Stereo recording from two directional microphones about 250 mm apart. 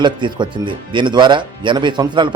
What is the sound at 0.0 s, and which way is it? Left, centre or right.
Speech, centre.